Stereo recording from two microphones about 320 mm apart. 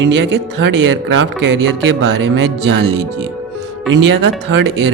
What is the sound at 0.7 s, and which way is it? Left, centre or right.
Speech, right.